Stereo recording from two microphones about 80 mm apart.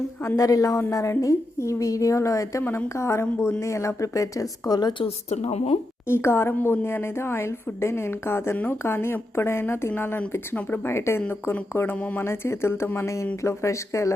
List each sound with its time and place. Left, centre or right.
0.3 s a woman's voice: left
6.1 s a woman's voice: left